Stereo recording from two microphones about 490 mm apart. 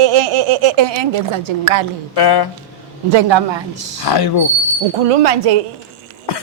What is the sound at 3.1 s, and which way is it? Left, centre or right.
Speech, right.